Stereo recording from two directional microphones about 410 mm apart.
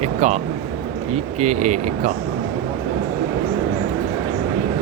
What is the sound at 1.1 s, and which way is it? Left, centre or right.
Speech, centre.